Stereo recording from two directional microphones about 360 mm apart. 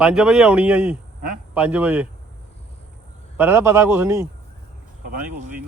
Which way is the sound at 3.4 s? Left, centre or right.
Centre.